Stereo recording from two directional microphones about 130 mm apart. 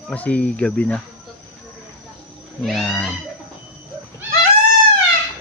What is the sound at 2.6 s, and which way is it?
Speech, 5° left (ahead or behind).